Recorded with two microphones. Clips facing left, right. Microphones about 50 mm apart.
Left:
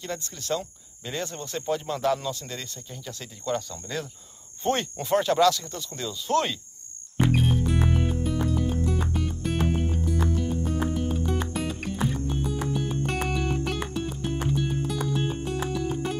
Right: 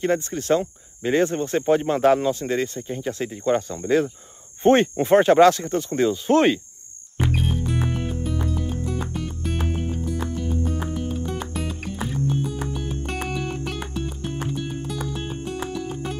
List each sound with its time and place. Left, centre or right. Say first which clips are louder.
0.0 s speech: right 12 dB; right
7.2 s music: left 1 dB; centre